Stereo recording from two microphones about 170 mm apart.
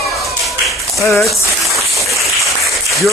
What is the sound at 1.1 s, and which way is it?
Speech, centre (ahead or behind).